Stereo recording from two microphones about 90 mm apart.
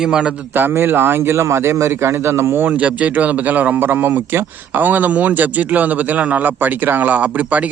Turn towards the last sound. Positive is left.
turn(degrees=-15)  # may be behind; listen again after turning